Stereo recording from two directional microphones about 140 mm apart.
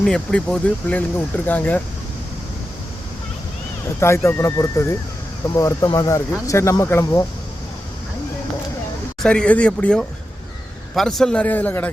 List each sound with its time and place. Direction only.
0.0 s speech: 5° left (ahead or behind)
4.0 s speech: 20° left (ahead or behind)
9.2 s speech: 5° left (ahead or behind)